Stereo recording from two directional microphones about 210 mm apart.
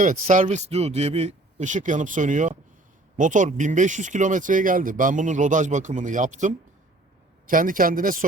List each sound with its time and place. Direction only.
0.0 s speech: 35° right (ahead or behind)